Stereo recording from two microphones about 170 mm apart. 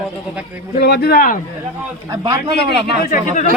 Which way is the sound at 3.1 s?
50° left (ahead or behind).